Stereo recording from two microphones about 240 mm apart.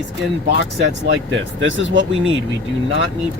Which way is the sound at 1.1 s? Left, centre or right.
Right.